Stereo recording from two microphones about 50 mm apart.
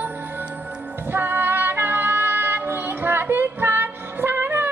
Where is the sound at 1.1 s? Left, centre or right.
Right.